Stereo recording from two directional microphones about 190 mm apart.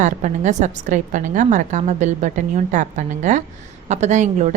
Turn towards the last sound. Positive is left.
turn(degrees=-40)  # may be behind; listen again after turning